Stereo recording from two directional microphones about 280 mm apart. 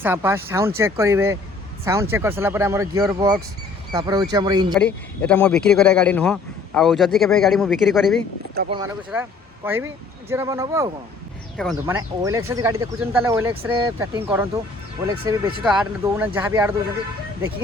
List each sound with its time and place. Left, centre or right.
0.0 s speech: centre
4.7 s a man's voice: centre
8.6 s speech: right
9.1 s a man's voice: centre
15.6 s a man's voice: centre